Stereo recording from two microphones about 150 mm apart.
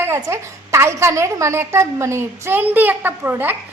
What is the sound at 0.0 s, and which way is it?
A woman's voice, 20° right (ahead or behind).